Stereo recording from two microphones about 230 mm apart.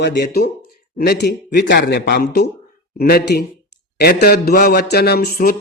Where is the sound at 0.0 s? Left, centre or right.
Left.